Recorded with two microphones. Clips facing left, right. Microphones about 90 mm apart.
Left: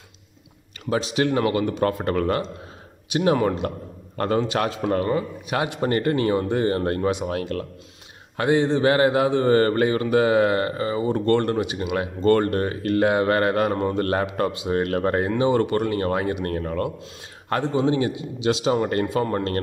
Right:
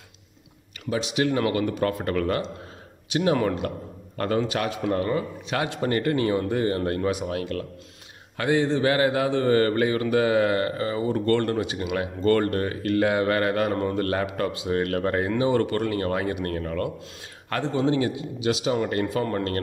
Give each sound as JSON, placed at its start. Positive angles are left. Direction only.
{"t": 0.8, "sound": "speech", "side_deg": 35}
{"t": 1.4, "sound": "a man's voice", "side_deg": 25}
{"t": 5.5, "sound": "a man's voice", "side_deg": 15}
{"t": 5.8, "sound": "speech", "side_deg": 35}
{"t": 7.0, "sound": "speech", "side_deg": 25}
{"t": 7.2, "sound": "speech", "side_deg": 40}
{"t": 8.4, "sound": "speech", "side_deg": 25}
{"t": 17.5, "sound": "speech", "side_deg": 15}
{"t": 19.0, "sound": "speech", "side_deg": 20}